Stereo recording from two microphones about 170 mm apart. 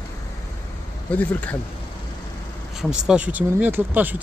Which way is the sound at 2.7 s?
5° right (ahead or behind).